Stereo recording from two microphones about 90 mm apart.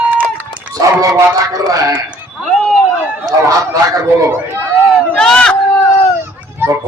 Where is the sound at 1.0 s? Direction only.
40° right (ahead or behind).